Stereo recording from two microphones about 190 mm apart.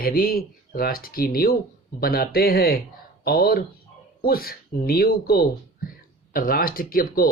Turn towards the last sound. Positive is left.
turn(degrees=50)  # may be behind; listen again after turning